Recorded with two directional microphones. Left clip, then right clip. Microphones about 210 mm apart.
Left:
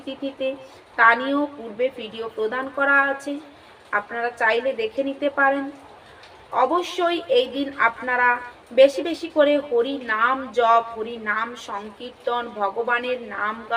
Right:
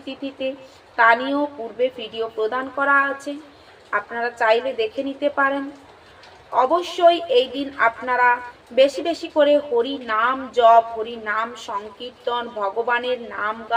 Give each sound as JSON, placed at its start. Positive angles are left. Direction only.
{"t": 0.0, "sound": "a woman's voice", "side_deg": -5}